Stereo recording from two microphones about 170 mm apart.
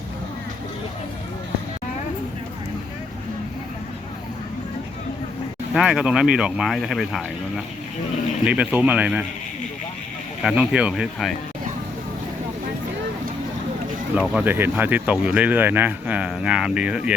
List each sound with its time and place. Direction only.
5.7 s speech: 5° right (ahead or behind)
10.4 s speech: 5° right (ahead or behind)
14.2 s speech: 10° right (ahead or behind)